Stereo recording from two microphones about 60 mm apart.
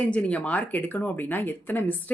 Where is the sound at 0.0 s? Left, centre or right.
Left.